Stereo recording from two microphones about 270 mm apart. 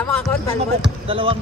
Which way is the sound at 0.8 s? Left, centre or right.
Centre.